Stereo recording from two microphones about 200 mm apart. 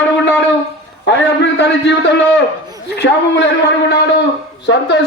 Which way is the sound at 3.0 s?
55° left (ahead or behind).